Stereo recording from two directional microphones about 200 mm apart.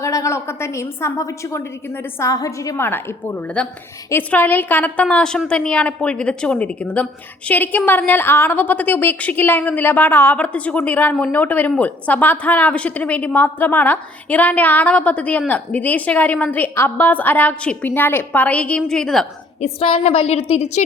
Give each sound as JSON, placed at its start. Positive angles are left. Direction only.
{"t": 0.0, "sound": "a woman's voice", "side_deg": 15}
{"t": 19.6, "sound": "a woman's voice", "side_deg": 30}